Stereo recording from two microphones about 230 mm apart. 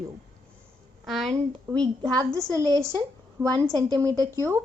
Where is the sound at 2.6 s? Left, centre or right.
Centre.